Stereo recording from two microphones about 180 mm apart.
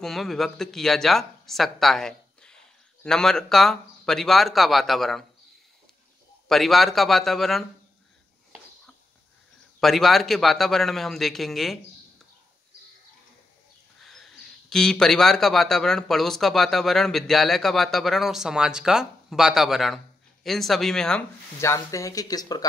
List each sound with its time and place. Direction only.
0.0 s speech: centre (ahead or behind)
6.5 s speech: centre (ahead or behind)
9.8 s speech: centre (ahead or behind)
14.0 s speech: centre (ahead or behind)
21.5 s speech: 15° left (ahead or behind)